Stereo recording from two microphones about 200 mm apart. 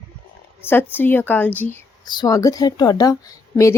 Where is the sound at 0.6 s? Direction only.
10° left (ahead or behind).